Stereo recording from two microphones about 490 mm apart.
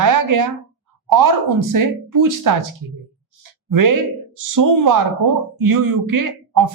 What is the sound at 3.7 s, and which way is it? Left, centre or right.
A woman's voice, right.